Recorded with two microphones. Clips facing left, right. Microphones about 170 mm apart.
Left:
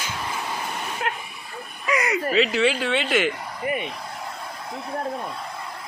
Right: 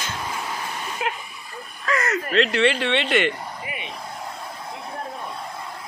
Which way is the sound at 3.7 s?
50° left (ahead or behind).